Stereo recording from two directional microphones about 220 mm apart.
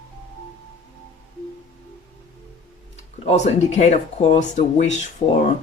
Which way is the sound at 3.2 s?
30° left (ahead or behind).